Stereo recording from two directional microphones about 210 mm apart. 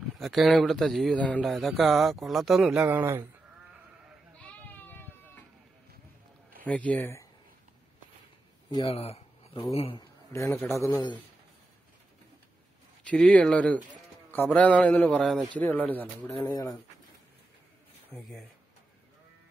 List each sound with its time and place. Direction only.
0.2 s speech: centre (ahead or behind)
4.4 s goat: 5° left (ahead or behind)
6.6 s speech: 5° left (ahead or behind)
8.6 s a man's voice: 25° left (ahead or behind)
10.3 s speech: 15° left (ahead or behind)
13.0 s speech: 5° left (ahead or behind)